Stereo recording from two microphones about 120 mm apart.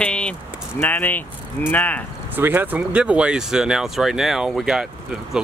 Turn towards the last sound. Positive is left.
turn(degrees=-5)  # may be behind; listen again after turning